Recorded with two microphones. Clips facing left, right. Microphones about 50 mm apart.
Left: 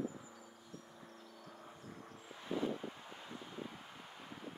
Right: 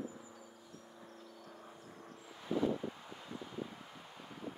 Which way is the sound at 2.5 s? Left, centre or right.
Left.